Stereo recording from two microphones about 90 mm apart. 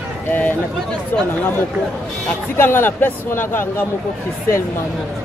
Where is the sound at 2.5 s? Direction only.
25° left (ahead or behind).